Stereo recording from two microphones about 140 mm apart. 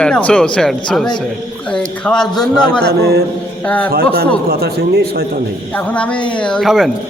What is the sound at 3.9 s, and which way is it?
Speech, 90° right.